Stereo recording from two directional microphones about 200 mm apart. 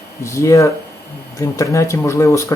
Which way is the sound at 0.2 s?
15° left (ahead or behind).